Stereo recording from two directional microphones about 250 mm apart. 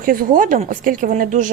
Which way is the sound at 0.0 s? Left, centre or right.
Right.